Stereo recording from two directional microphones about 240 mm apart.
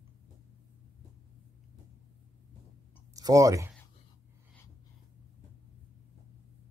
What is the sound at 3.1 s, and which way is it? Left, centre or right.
Speech, centre.